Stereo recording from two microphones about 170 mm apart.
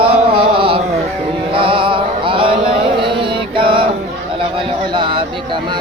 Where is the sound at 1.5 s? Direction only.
30° right (ahead or behind).